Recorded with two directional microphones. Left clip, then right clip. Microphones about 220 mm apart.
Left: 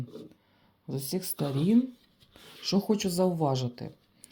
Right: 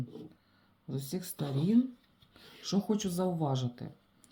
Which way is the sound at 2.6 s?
25° left (ahead or behind).